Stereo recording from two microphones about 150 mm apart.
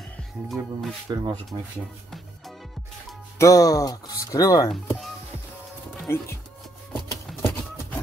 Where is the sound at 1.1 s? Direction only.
20° right (ahead or behind).